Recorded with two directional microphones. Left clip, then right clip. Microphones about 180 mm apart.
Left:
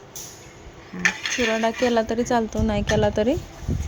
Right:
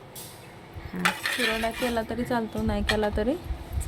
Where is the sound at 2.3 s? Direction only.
30° left (ahead or behind).